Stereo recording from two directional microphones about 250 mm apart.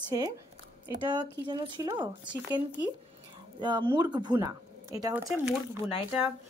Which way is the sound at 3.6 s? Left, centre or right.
Centre.